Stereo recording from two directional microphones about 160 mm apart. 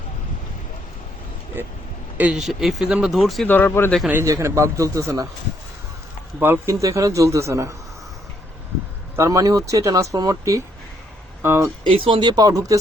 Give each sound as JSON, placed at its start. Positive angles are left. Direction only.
{"t": 2.1, "sound": "speech", "side_deg": -5}
{"t": 3.5, "sound": "speech", "side_deg": 10}
{"t": 4.0, "sound": "speech", "side_deg": -15}
{"t": 6.4, "sound": "speech", "side_deg": -15}
{"t": 9.1, "sound": "speech", "side_deg": -20}
{"t": 11.8, "sound": "speech", "side_deg": -35}